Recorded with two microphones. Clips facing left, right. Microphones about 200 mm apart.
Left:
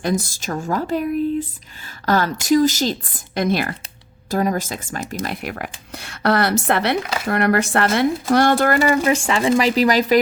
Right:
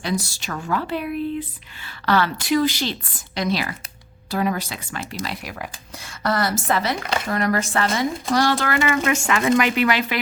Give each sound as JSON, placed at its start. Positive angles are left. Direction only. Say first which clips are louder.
{"t": 0.0, "sound": "a woman's voice", "louder": "left 4 dB", "side_deg": 45}